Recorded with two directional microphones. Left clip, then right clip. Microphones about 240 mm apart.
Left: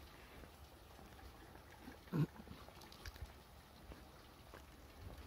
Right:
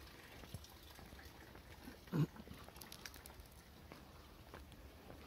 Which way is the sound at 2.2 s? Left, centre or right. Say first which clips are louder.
Right 1 dB; centre.